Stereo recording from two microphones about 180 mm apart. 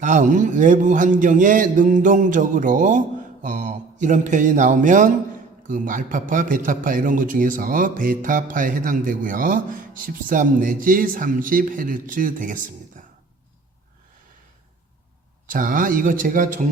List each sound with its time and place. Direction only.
0.0 s a man's voice: 45° right (ahead or behind)
15.4 s a man's voice: 50° right (ahead or behind)